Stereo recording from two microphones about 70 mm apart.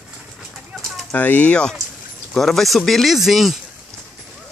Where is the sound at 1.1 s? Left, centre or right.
Left.